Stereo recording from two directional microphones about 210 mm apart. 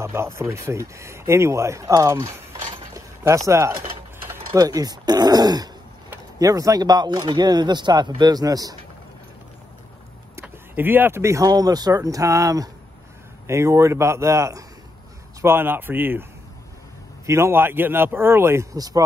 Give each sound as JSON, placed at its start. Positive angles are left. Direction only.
{"t": 0.0, "sound": "speech", "side_deg": -10}
{"t": 2.9, "sound": "a sound", "side_deg": -15}
{"t": 4.5, "sound": "speech", "side_deg": -20}
{"t": 10.3, "sound": "speech", "side_deg": -10}
{"t": 17.3, "sound": "speech", "side_deg": -10}